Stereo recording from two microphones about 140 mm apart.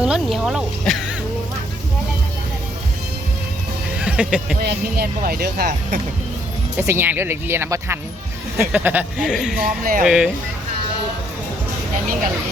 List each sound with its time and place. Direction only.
0.0 s speech: 5° right (ahead or behind)
3.9 s music: 10° right (ahead or behind)
4.9 s speech: 90° right
6.7 s speech: 15° right (ahead or behind)
9.6 s speech: 80° right
10.0 s speech: 5° right (ahead or behind)